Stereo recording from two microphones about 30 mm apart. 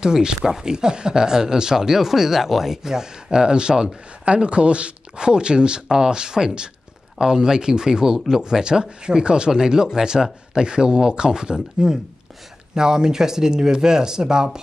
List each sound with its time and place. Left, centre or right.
0.0 s speech: right